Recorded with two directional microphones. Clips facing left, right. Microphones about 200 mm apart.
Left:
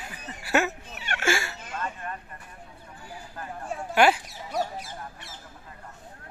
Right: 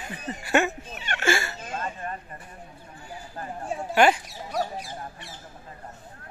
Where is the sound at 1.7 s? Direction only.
30° right (ahead or behind).